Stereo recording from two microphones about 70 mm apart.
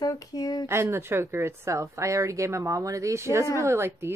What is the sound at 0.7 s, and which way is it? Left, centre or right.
A woman's voice, right.